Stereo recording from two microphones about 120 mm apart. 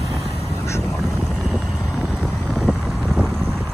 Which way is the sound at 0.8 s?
Centre (ahead or behind).